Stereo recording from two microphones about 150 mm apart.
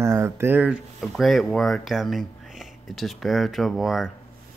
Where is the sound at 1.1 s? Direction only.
Centre (ahead or behind).